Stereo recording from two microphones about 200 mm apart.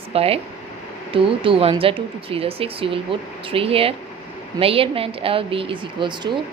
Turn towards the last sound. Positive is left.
turn(degrees=-25)  # may be behind; listen again after turning